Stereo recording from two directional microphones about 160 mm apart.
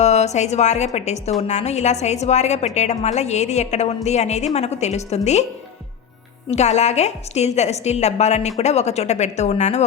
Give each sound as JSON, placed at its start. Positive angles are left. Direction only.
{"t": 0.0, "sound": "a woman's voice", "side_deg": 45}
{"t": 6.5, "sound": "a woman's voice", "side_deg": 45}